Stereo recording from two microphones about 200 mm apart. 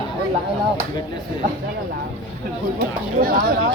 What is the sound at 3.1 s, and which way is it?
Speech, 45° right (ahead or behind).